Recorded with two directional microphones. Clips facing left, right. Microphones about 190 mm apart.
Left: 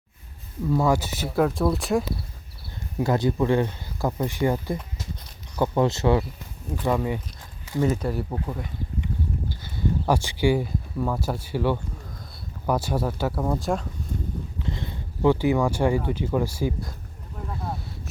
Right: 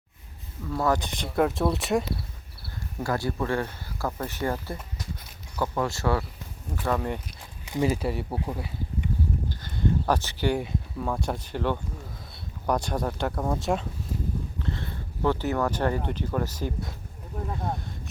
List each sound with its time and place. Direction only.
0.8 s speech: 10° left (ahead or behind)
3.0 s speech: 20° left (ahead or behind)
6.8 s speech: 10° left (ahead or behind)
7.6 s speech: 15° right (ahead or behind)
8.0 s speech: 5° right (ahead or behind)
9.5 s a sound: 10° left (ahead or behind)
10.6 s speech: centre (ahead or behind)
14.6 s speech: 15° left (ahead or behind)